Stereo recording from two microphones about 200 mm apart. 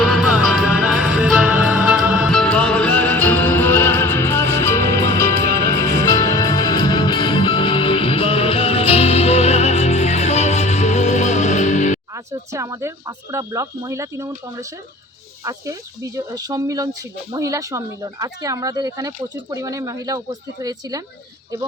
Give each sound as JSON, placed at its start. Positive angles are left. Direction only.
{"t": 0.0, "sound": "music", "side_deg": 0}
{"t": 12.1, "sound": "speech", "side_deg": -15}